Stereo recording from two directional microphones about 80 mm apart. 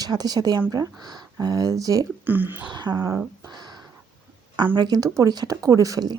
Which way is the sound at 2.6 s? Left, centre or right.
Right.